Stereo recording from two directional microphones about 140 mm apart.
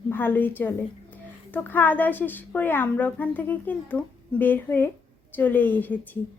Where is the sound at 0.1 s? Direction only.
15° left (ahead or behind).